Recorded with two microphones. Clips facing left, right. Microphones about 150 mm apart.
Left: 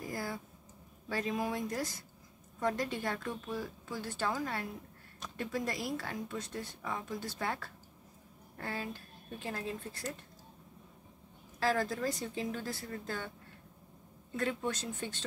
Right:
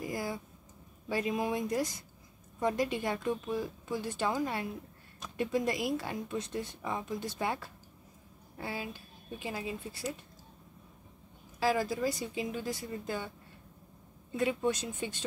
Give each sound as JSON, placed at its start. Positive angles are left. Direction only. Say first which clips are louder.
{"t": 0.0, "sound": "a sound", "louder": "right 3 dB", "side_deg": -15}
{"t": 1.0, "sound": "speech", "louder": "right 3 dB", "side_deg": -15}
{"t": 11.6, "sound": "speech", "louder": "right 2 dB", "side_deg": -10}
{"t": 14.3, "sound": "speech", "louder": "right 4 dB", "side_deg": -15}